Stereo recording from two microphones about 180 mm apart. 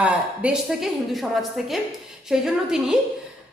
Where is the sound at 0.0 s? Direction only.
5° right (ahead or behind).